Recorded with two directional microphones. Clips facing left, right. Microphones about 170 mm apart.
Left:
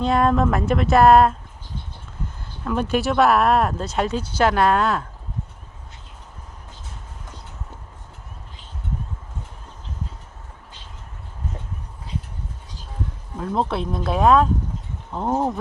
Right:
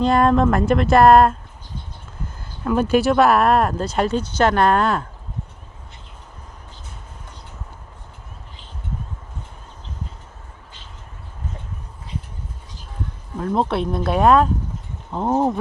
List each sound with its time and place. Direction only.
0.0 s speech: centre (ahead or behind)
2.6 s speech: 5° right (ahead or behind)
13.4 s speech: centre (ahead or behind)